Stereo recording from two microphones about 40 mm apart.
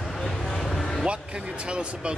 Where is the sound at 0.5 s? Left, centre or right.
Centre.